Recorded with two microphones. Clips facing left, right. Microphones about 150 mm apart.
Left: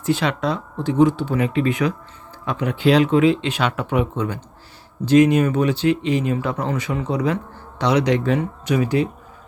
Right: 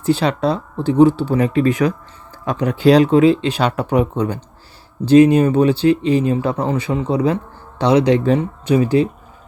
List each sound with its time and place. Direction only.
0.0 s speech: 35° right (ahead or behind)